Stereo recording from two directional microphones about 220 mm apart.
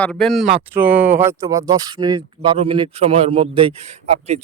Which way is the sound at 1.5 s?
15° right (ahead or behind).